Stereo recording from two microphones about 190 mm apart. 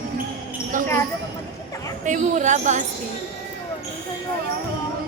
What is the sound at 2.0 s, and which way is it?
Speech, 40° right (ahead or behind).